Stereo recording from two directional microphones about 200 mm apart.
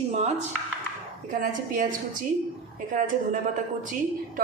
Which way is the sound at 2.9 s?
40° right (ahead or behind).